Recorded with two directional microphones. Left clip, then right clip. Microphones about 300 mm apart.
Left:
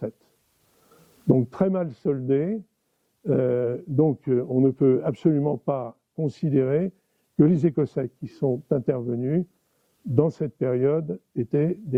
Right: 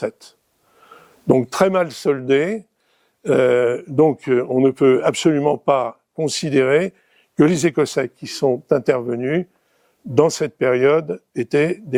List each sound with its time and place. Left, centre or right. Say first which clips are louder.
1.4 s speech: right 8 dB; centre